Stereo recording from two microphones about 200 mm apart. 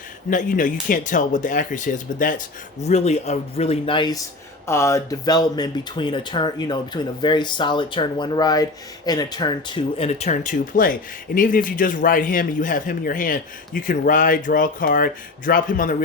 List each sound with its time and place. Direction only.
0.3 s a man's voice: 40° left (ahead or behind)